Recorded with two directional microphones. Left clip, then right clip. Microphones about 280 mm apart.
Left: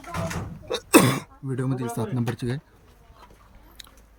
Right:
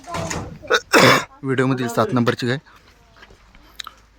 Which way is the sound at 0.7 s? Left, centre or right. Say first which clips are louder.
Right 7 dB; centre.